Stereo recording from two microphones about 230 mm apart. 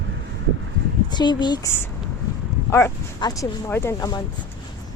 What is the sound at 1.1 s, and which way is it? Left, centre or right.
A woman's voice, centre.